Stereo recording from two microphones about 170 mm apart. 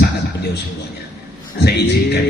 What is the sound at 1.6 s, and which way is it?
Speech, 80° left.